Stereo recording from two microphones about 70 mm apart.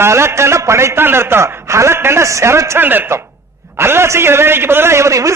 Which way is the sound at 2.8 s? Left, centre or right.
Right.